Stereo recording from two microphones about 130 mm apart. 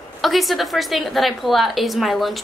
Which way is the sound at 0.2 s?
Centre (ahead or behind).